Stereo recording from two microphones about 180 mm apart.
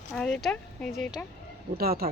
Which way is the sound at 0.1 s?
5° left (ahead or behind).